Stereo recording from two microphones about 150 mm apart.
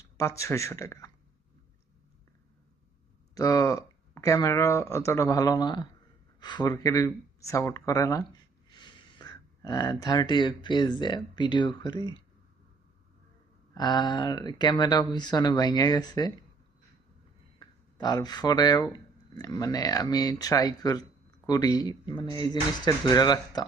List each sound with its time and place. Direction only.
0.2 s speech: 20° left (ahead or behind)
3.3 s speech: 20° left (ahead or behind)
13.7 s speech: 30° left (ahead or behind)
17.6 s speech: 30° left (ahead or behind)